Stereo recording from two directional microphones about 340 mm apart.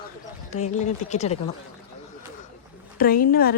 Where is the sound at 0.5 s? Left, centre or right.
Left.